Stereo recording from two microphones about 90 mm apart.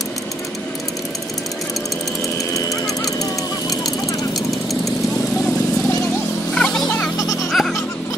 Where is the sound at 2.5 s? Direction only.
40° left (ahead or behind).